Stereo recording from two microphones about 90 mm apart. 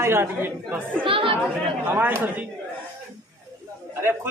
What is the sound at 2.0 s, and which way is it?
Speech, 25° right (ahead or behind).